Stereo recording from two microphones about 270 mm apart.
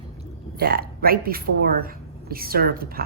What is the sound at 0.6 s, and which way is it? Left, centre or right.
Speech, right.